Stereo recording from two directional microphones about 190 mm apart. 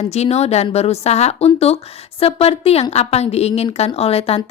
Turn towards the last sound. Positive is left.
turn(degrees=30)  # may be behind; listen again after turning